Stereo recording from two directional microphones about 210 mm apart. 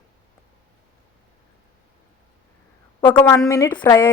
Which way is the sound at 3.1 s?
10° left (ahead or behind).